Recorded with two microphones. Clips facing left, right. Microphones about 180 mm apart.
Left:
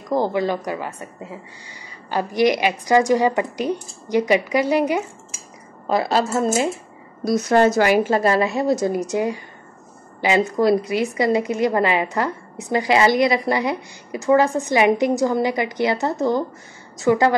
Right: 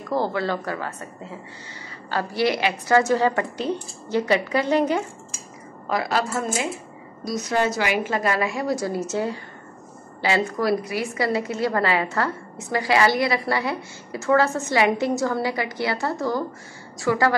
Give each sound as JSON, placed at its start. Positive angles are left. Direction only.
{"t": 0.1, "sound": "a woman's voice", "side_deg": 15}
{"t": 5.9, "sound": "a woman's voice", "side_deg": 30}
{"t": 7.2, "sound": "a woman's voice", "side_deg": 55}